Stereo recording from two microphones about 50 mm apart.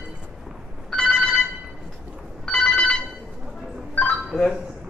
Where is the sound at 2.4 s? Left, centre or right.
Centre.